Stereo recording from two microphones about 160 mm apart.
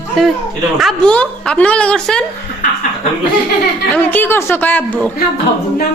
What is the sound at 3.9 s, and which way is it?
A woman's voice, 10° left (ahead or behind).